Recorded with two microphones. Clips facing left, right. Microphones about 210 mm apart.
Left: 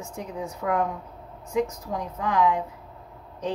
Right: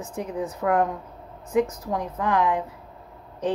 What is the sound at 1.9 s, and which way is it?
Speech, 55° right (ahead or behind).